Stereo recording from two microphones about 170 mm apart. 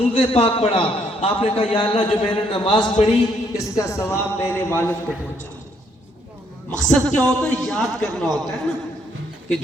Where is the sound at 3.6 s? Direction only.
20° left (ahead or behind).